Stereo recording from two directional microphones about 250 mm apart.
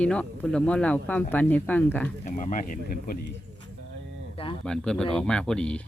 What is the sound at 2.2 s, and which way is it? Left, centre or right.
Speech, left.